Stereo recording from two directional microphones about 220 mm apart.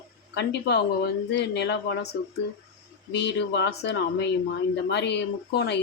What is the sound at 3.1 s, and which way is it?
A man's voice, 50° left (ahead or behind).